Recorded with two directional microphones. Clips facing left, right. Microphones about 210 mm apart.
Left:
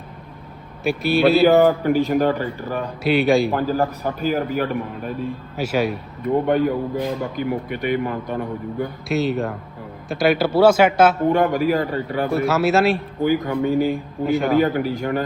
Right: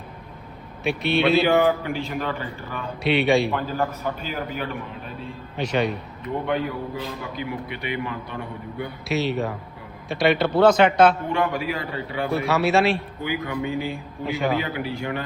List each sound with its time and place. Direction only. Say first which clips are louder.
0.9 s a man's voice: left 4 dB; centre (ahead or behind)
1.5 s a man's voice: left 5 dB; 40° left (ahead or behind)
3.0 s a man's voice: left 3 dB; centre (ahead or behind)
3.5 s a man's voice: left 5 dB; 40° left (ahead or behind)
5.5 s speech: left 2 dB; 5° left (ahead or behind)
6.2 s a man's voice: left 7 dB; 45° left (ahead or behind)
9.0 s a man's voice: left 2 dB; centre (ahead or behind)
11.3 s a man's voice: left 7 dB; 45° left (ahead or behind)
12.3 s a man's voice: left 2 dB; centre (ahead or behind)
13.2 s a man's voice: left 8 dB; 45° left (ahead or behind)
14.3 s a man's voice: left 6 dB; centre (ahead or behind)
14.6 s a man's voice: left 8 dB; 45° left (ahead or behind)